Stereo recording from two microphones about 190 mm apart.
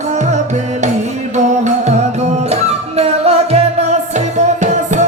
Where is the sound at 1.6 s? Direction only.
40° right (ahead or behind).